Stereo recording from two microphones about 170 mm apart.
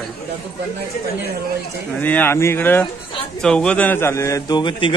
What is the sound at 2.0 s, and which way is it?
A man's voice, 10° left (ahead or behind).